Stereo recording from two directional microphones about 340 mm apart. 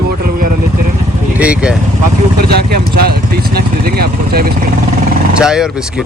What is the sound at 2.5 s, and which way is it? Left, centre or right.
Speech, right.